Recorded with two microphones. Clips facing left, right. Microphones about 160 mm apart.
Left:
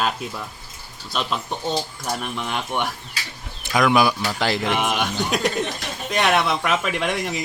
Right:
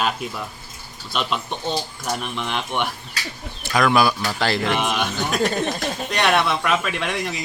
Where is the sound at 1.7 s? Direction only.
Centre (ahead or behind).